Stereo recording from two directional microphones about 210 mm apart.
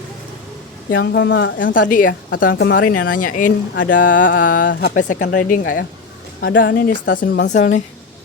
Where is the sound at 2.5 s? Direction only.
55° left (ahead or behind).